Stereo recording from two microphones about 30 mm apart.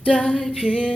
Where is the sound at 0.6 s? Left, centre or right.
Left.